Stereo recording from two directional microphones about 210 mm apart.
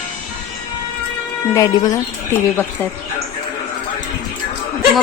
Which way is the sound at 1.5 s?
15° left (ahead or behind).